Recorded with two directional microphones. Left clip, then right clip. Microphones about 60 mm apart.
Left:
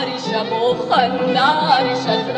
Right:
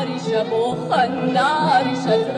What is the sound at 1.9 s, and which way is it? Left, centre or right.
Speech, right.